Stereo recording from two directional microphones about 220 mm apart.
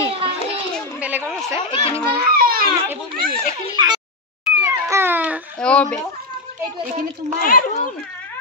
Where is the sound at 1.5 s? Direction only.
25° left (ahead or behind).